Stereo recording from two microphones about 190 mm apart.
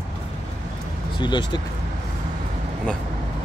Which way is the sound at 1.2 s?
25° left (ahead or behind).